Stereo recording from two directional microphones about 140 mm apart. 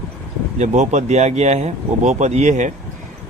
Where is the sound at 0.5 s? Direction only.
55° right (ahead or behind).